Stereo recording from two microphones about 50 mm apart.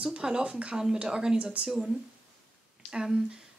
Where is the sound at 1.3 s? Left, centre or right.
Right.